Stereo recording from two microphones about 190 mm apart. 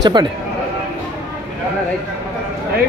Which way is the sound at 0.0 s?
20° right (ahead or behind).